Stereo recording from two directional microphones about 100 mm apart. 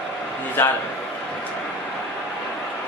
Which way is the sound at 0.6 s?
20° left (ahead or behind).